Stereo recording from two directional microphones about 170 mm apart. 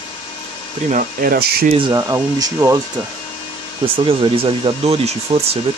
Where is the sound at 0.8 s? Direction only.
50° right (ahead or behind).